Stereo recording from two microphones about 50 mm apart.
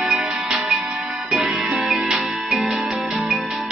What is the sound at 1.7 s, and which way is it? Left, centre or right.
Music, centre.